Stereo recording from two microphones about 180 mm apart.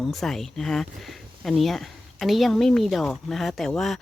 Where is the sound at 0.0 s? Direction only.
Centre (ahead or behind).